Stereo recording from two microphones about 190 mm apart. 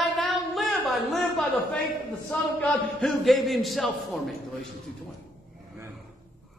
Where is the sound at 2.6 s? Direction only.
5° left (ahead or behind).